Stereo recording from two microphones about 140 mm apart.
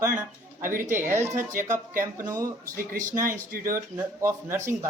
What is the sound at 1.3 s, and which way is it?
Speech, 65° right (ahead or behind).